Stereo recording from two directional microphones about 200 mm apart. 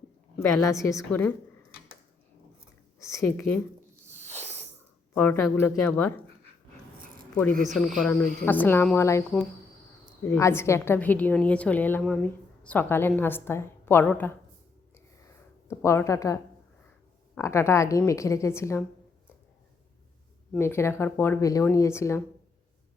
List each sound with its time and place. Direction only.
0.3 s a woman's voice: 15° left (ahead or behind)
3.0 s a woman's voice: 15° left (ahead or behind)
4.1 s a sound: 35° right (ahead or behind)
5.1 s a woman's voice: 10° left (ahead or behind)
7.7 s a woman's voice: 5° left (ahead or behind)
10.2 s a woman's voice: 15° left (ahead or behind)
14.9 s a sound: 15° left (ahead or behind)
17.3 s a woman's voice: 15° left (ahead or behind)
20.6 s a woman's voice: 10° left (ahead or behind)